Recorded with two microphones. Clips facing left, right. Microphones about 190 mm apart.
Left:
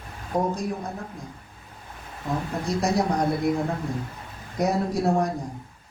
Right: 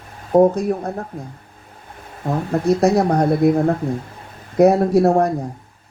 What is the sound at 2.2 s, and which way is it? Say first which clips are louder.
Speech: right 9 dB; 60° right (ahead or behind).